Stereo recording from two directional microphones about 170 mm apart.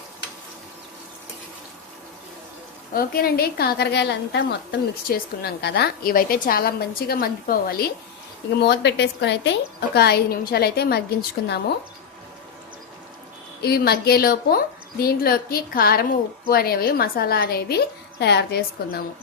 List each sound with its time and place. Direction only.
2.9 s a woman's voice: 60° left (ahead or behind)
8.6 s a woman's voice: 80° left
13.6 s a woman's voice: 65° left (ahead or behind)